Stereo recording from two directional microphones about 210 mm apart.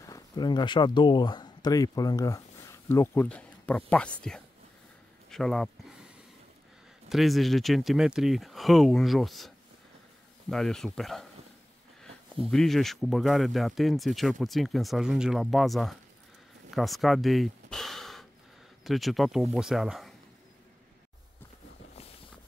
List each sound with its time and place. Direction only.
0.0 s speech: 20° left (ahead or behind); by 5.9 s centre (ahead or behind)
7.1 s speech: centre (ahead or behind)
10.5 s speech: 5° left (ahead or behind)